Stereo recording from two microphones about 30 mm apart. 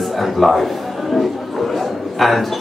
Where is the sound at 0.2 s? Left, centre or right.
Centre.